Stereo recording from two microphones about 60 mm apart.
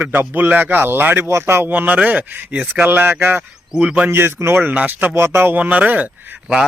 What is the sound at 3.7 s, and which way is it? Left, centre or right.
Speech, right.